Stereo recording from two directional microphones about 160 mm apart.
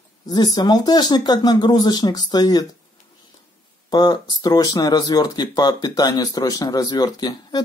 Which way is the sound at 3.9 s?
25° left (ahead or behind).